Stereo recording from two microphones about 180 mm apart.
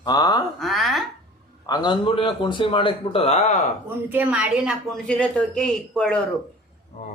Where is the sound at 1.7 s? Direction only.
25° left (ahead or behind); by 3.7 s 40° left (ahead or behind).